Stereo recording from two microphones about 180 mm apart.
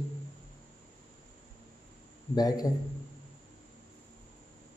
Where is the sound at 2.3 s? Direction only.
20° left (ahead or behind).